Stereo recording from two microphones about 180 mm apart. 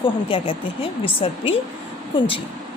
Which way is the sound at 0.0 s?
30° left (ahead or behind).